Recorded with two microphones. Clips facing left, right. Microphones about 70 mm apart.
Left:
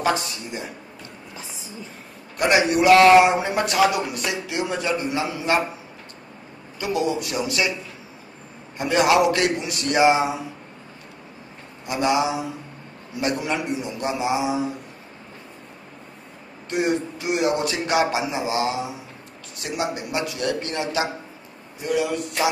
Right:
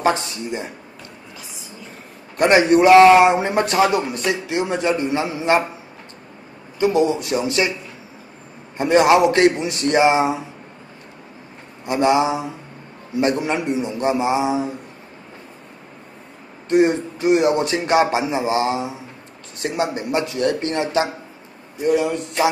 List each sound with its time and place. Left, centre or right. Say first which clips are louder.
0.0 s a man's voice: right 3 dB; right
2.3 s a man's voice: right 5 dB; right
6.8 s a man's voice: right 6 dB; right
8.7 s a man's voice: right 4 dB; right
11.8 s a man's voice: right 4 dB; right
16.6 s a man's voice: right 7 dB; right